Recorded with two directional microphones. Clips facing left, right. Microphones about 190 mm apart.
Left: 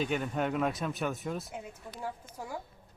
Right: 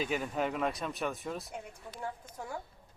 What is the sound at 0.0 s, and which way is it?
Speech, centre (ahead or behind).